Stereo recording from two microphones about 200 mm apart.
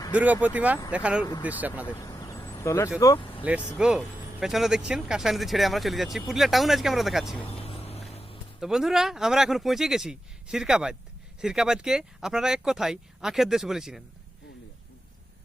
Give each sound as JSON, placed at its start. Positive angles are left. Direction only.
{"t": 0.1, "sound": "speech", "side_deg": -5}
{"t": 1.9, "sound": "vehicle", "side_deg": 15}
{"t": 3.0, "sound": "speech", "side_deg": 20}
{"t": 3.8, "sound": "speech", "side_deg": -5}
{"t": 7.4, "sound": "vehicle", "side_deg": 30}
{"t": 8.6, "sound": "speech", "side_deg": 0}